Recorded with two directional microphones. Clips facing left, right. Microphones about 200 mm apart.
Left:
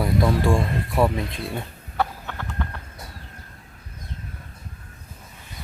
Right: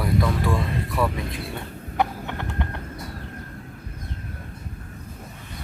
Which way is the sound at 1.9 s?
20° right (ahead or behind).